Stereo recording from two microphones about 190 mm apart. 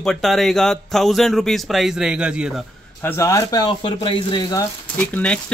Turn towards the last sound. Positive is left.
turn(degrees=10)  # may be behind; listen again after turning